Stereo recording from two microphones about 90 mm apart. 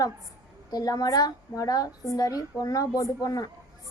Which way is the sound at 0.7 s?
45° left (ahead or behind).